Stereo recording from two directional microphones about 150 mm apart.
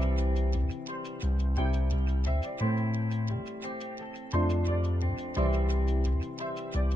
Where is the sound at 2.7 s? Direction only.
15° right (ahead or behind).